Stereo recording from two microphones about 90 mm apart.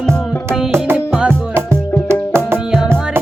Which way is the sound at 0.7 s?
20° right (ahead or behind).